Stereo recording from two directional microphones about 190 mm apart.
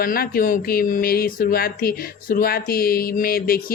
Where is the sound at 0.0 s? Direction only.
50° left (ahead or behind).